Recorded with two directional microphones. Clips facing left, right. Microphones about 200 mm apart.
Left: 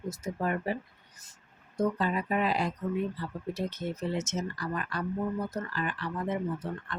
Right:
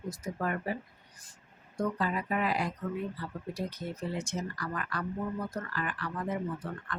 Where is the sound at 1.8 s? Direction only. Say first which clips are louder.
Left 3 dB; 25° left (ahead or behind).